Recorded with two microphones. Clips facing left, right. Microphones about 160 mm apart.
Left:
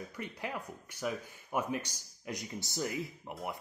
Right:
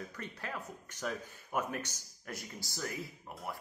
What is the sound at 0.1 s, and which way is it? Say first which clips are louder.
Speech: left 3 dB; 15° left (ahead or behind).